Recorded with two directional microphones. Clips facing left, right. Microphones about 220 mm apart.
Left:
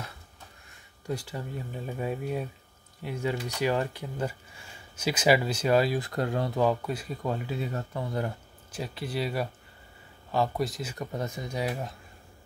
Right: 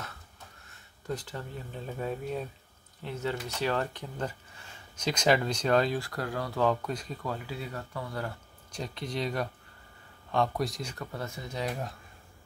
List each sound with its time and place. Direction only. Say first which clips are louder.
1.0 s speech: left 2 dB; 10° left (ahead or behind)
5.9 s speech: left 4 dB; 20° left (ahead or behind)
6.6 s speech: even; 10° left (ahead or behind)
7.2 s speech: left 6 dB; 20° left (ahead or behind)
8.7 s speech: left 2 dB; 5° left (ahead or behind)
11.0 s speech: left 8 dB; 20° left (ahead or behind)